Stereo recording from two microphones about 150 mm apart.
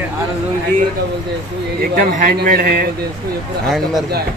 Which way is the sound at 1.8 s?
60° right (ahead or behind).